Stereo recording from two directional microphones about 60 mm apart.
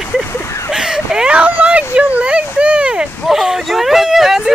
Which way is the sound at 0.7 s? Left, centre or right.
Centre.